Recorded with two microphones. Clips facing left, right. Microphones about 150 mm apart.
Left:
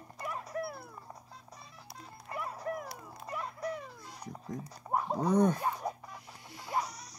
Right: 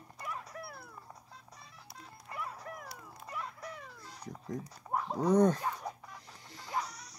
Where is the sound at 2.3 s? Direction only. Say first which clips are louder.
Left 3 dB; 40° left (ahead or behind).